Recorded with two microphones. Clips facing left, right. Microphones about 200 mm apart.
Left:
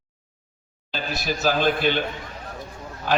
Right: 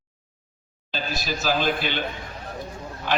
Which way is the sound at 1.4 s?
50° left (ahead or behind).